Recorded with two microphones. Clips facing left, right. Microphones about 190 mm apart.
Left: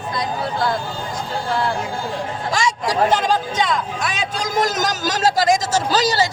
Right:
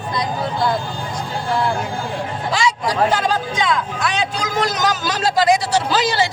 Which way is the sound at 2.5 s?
45° left (ahead or behind).